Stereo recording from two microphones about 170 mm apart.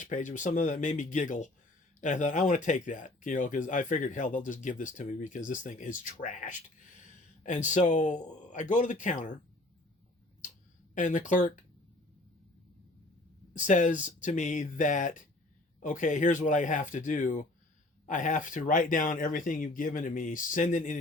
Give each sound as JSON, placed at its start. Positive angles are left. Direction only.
{"t": 0.0, "sound": "speech", "side_deg": 50}
{"t": 10.9, "sound": "speech", "side_deg": 50}
{"t": 13.7, "sound": "speech", "side_deg": 45}